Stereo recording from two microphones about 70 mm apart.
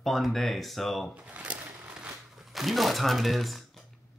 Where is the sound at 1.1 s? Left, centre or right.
Centre.